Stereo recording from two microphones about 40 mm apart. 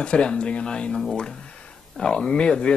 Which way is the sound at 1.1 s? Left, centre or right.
Centre.